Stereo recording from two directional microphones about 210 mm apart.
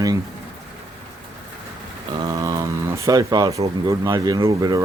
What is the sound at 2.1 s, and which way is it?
Speech, 15° right (ahead or behind).